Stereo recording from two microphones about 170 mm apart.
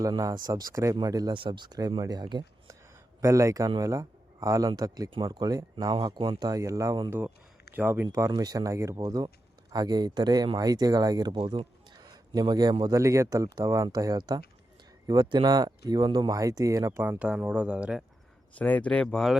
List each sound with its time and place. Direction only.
0.0 s speech: 20° right (ahead or behind)
7.1 s speech: 10° right (ahead or behind)
18.5 s speech: 10° left (ahead or behind)